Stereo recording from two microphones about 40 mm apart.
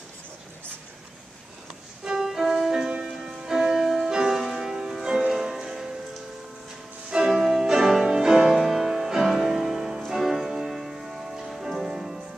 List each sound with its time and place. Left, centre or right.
2.0 s music: centre
7.2 s music: centre